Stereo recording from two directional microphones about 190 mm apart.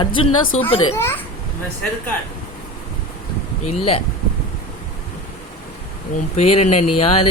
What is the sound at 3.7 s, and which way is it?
Speech, 30° left (ahead or behind).